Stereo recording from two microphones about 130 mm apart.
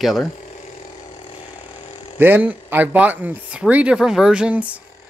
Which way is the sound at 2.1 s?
15° right (ahead or behind).